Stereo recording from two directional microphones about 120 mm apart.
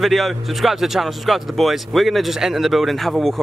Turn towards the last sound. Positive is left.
turn(degrees=0)  # may be behind; listen again after turning